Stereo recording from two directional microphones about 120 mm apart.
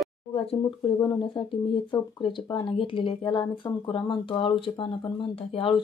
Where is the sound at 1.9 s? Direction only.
40° left (ahead or behind).